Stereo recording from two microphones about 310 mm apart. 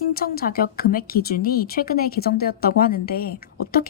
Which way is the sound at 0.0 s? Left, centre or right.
Left.